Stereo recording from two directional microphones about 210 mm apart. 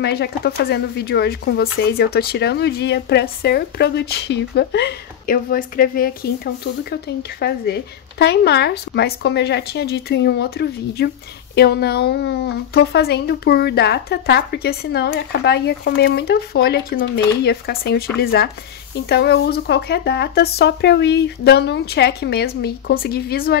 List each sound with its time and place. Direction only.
0.0 s speech: 50° left (ahead or behind)